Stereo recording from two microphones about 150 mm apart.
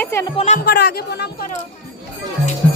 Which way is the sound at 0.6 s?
90° left.